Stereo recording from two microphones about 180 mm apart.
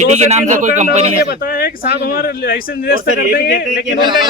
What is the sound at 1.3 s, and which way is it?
Speech, 55° left (ahead or behind).